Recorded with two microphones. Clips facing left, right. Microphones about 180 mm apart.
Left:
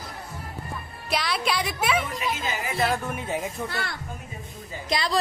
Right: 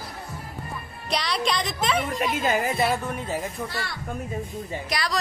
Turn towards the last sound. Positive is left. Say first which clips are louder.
# left 2 dB
turn(degrees=25)  # may be behind; listen again after turning